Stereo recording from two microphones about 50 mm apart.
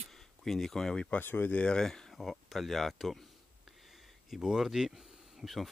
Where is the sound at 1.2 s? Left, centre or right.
Left.